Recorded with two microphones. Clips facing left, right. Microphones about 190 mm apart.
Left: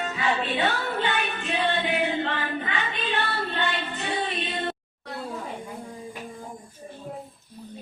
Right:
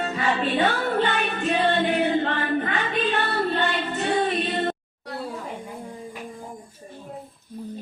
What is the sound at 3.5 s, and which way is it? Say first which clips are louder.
Child singing: right 4 dB; 45° right (ahead or behind).